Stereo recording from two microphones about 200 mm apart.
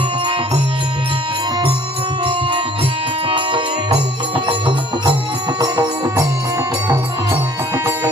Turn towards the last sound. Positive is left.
turn(degrees=-15)  # may be behind; listen again after turning